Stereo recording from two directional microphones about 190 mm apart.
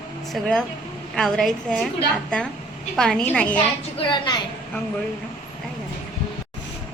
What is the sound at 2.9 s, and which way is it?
Speech, 5° left (ahead or behind).